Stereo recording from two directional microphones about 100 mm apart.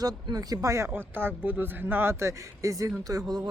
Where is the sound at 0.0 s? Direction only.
40° right (ahead or behind).